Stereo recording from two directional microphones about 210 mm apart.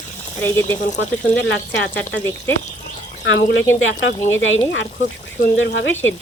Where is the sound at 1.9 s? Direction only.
10° left (ahead or behind).